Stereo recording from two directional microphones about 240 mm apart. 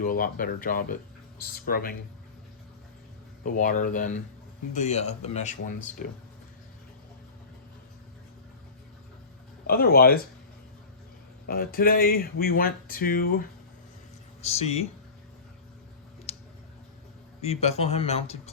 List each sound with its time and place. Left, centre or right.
0.0 s speech: left
3.4 s speech: left
9.6 s speech: left
11.4 s speech: left
14.4 s speech: left
16.3 s a sound: left
17.4 s speech: left